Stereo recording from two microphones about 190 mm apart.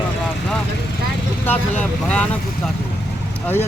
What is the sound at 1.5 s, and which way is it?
Speech, 10° left (ahead or behind).